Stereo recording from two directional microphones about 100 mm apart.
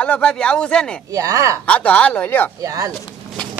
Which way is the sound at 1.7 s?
15° left (ahead or behind).